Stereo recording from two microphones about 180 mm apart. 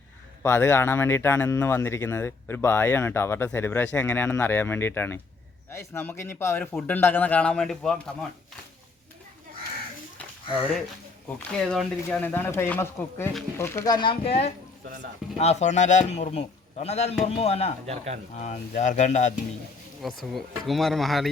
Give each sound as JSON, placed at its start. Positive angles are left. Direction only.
{"t": 0.4, "sound": "speech", "side_deg": 15}
{"t": 11.3, "sound": "a man's voice", "side_deg": 5}
{"t": 17.8, "sound": "speech", "side_deg": -35}
{"t": 18.3, "sound": "a man's voice", "side_deg": 40}
{"t": 20.0, "sound": "speech", "side_deg": 0}